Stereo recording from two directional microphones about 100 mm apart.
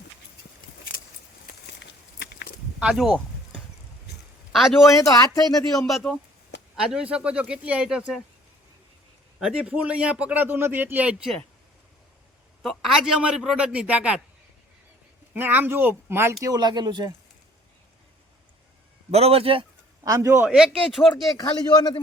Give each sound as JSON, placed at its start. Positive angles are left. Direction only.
{"t": 2.8, "sound": "a man's voice", "side_deg": -5}
{"t": 4.5, "sound": "a man's voice", "side_deg": 0}
{"t": 4.9, "sound": "speech", "side_deg": 35}
{"t": 5.7, "sound": "a man's voice", "side_deg": 0}
{"t": 6.8, "sound": "speech", "side_deg": -10}
{"t": 9.4, "sound": "speech", "side_deg": -10}
{"t": 12.6, "sound": "a man's voice", "side_deg": 0}
{"t": 15.3, "sound": "speech", "side_deg": -20}
{"t": 16.4, "sound": "speech", "side_deg": -40}
{"t": 19.1, "sound": "speech", "side_deg": -85}
{"t": 20.1, "sound": "speech", "side_deg": -30}
{"t": 20.5, "sound": "a man's voice", "side_deg": 0}
{"t": 21.1, "sound": "speech", "side_deg": 40}